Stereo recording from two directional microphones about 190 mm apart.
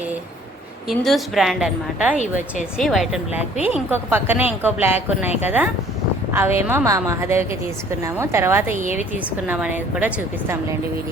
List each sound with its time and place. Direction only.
0.9 s a woman's voice: centre (ahead or behind)
2.1 s speech: 40° left (ahead or behind)
2.7 s a woman's voice: centre (ahead or behind)